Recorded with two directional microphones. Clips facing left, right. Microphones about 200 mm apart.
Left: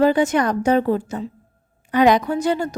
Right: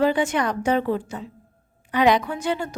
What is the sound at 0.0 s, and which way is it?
A woman's voice, 40° left (ahead or behind).